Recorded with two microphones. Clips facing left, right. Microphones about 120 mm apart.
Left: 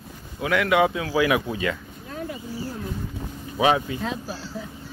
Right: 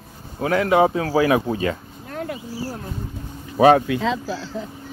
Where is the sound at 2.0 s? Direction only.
70° right (ahead or behind).